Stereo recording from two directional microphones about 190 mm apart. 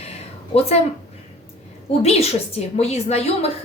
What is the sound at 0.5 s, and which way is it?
Speech, 35° left (ahead or behind).